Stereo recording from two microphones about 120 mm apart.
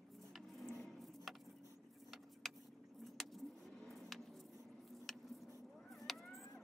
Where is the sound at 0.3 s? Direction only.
Centre (ahead or behind).